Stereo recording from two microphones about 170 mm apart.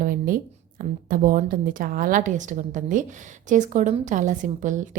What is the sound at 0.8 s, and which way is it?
A woman's voice, 55° right (ahead or behind).